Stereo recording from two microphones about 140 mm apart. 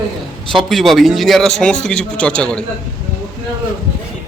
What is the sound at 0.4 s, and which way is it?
Speech, centre (ahead or behind).